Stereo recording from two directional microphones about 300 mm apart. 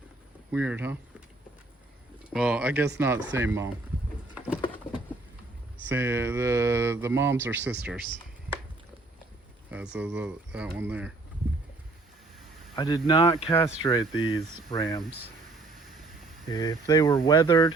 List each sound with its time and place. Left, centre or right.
0.5 s speech: centre
2.3 s speech: centre
4.4 s patter: centre
5.9 s speech: centre
9.6 s speech: centre
12.7 s speech: centre
16.5 s speech: centre